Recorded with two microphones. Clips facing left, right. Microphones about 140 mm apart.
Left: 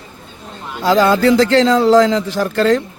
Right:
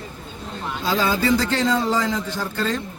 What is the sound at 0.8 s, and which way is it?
Speech, 85° left.